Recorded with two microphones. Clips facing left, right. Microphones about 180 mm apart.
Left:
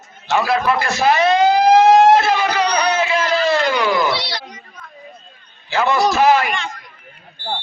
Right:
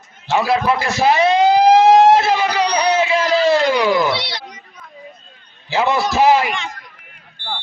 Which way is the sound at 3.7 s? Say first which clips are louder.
Right 2 dB; 20° right (ahead or behind).